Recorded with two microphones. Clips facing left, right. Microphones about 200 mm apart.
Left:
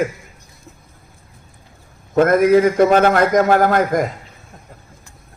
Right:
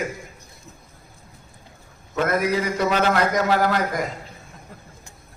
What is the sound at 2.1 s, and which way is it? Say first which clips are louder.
A man's voice: left 10 dB; 50° left (ahead or behind).